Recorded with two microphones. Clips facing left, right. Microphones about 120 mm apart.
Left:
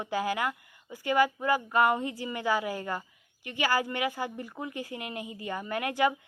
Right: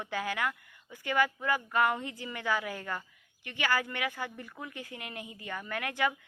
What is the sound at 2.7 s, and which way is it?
Speech, 30° left (ahead or behind).